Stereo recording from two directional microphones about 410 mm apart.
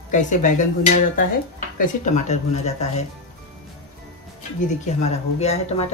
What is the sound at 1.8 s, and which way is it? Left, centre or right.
Speech, centre.